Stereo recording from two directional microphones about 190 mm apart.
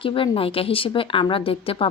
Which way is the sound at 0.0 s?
30° left (ahead or behind).